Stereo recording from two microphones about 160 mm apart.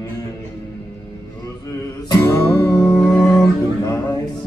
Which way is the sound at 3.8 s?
20° left (ahead or behind).